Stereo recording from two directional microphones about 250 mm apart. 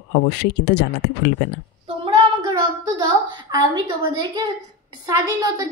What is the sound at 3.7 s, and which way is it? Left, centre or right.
A woman's voice, centre.